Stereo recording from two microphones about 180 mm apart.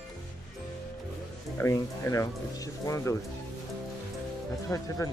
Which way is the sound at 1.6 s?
15° left (ahead or behind).